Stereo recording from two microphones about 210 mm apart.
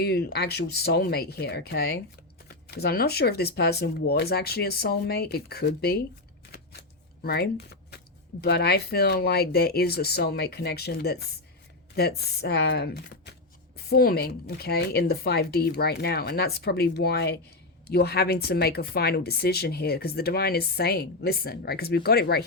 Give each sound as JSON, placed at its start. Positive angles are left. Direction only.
{"t": 0.0, "sound": "speech", "side_deg": 50}